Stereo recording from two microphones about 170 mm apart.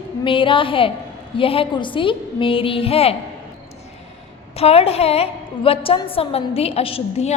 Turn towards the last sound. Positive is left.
turn(degrees=35)  # may be behind; listen again after turning